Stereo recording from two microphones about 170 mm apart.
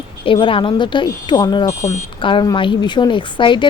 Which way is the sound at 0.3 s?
30° left (ahead or behind).